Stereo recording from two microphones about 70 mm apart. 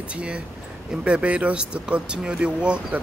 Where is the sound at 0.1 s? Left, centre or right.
Centre.